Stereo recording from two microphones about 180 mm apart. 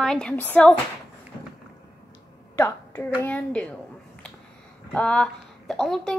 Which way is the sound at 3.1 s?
5° left (ahead or behind).